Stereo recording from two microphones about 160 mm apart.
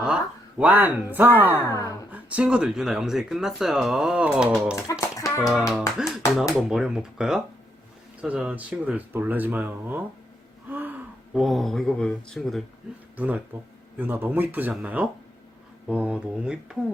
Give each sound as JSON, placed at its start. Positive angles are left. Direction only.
{"t": 0.6, "sound": "speech", "side_deg": -10}
{"t": 1.7, "sound": "a sound", "side_deg": 20}
{"t": 2.1, "sound": "speech", "side_deg": -5}
{"t": 4.7, "sound": "speech", "side_deg": 20}
{"t": 6.0, "sound": "speech", "side_deg": 0}
{"t": 13.1, "sound": "speech", "side_deg": -10}